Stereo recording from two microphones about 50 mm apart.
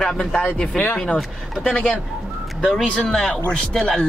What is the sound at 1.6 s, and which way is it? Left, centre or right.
A man's voice, left.